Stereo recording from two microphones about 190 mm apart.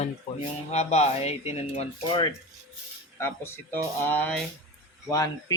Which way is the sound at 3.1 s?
15° left (ahead or behind).